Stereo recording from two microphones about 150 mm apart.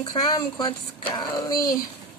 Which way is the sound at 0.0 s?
30° left (ahead or behind).